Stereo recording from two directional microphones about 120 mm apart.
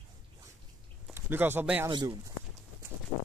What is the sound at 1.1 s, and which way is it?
Speech, 20° right (ahead or behind).